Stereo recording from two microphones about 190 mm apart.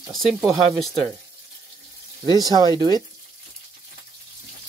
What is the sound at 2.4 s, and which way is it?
Speech, 20° right (ahead or behind).